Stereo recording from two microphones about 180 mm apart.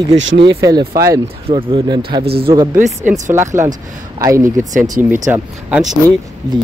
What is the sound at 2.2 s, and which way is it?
Speech, 60° right (ahead or behind).